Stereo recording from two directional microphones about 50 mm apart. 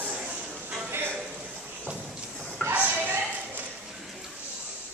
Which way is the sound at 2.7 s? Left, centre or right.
Right.